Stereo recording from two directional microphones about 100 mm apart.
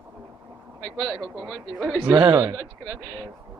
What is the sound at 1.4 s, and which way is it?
Speech, centre (ahead or behind).